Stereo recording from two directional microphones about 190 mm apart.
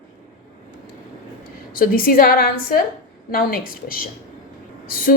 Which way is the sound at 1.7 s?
50° left (ahead or behind).